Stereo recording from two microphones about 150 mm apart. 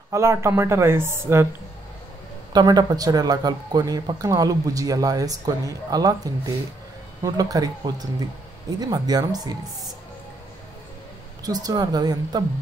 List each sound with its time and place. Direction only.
0.1 s speech: 20° right (ahead or behind)
2.5 s speech: 30° right (ahead or behind)
11.4 s speech: 25° right (ahead or behind)